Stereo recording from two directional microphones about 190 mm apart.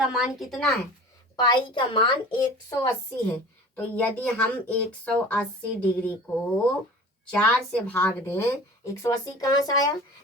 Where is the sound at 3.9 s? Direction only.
5° left (ahead or behind).